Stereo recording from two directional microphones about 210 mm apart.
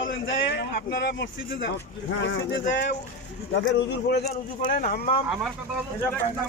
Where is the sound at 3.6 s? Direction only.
40° left (ahead or behind).